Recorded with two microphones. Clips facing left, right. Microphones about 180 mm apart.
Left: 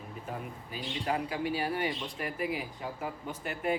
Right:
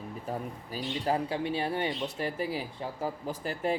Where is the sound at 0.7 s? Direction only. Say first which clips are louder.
Right 3 dB; 35° right (ahead or behind).